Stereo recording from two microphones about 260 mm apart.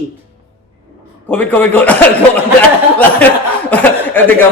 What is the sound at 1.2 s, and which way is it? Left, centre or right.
Speech, centre.